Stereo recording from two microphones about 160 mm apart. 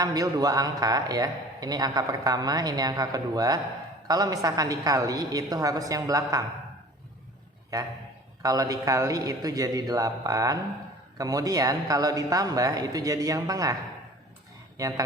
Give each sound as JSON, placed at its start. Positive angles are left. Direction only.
{"t": 0.0, "sound": "a man's voice", "side_deg": -25}
{"t": 7.7, "sound": "a man's voice", "side_deg": -20}
{"t": 14.8, "sound": "a man's voice", "side_deg": -20}